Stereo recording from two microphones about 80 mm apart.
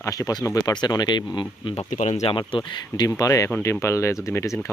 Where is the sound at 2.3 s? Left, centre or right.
Left.